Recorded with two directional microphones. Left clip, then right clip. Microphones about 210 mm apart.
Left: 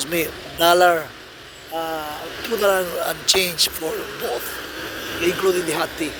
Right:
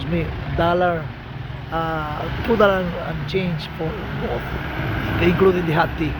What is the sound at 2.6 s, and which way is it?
Speech, 30° left (ahead or behind).